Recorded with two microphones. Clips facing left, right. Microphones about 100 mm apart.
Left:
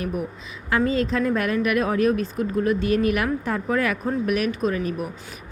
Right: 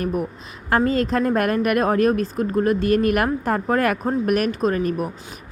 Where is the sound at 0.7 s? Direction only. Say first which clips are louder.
Right 3 dB; 50° right (ahead or behind).